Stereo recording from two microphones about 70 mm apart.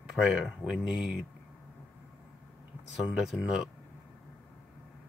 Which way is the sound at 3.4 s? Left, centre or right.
Centre.